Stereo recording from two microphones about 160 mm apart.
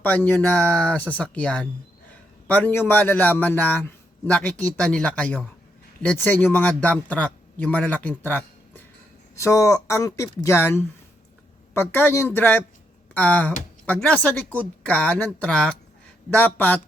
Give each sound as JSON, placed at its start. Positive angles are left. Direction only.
{"t": 0.0, "sound": "a man's voice", "side_deg": 10}
{"t": 8.2, "sound": "a sound", "side_deg": 10}
{"t": 9.3, "sound": "a man's voice", "side_deg": 20}